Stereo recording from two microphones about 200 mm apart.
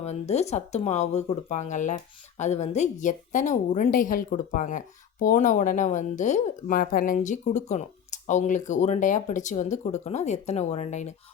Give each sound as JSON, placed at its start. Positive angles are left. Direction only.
{"t": 0.0, "sound": "speech", "side_deg": 35}